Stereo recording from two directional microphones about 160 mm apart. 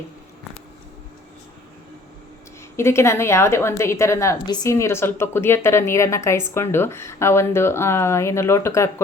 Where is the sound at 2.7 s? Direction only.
15° left (ahead or behind).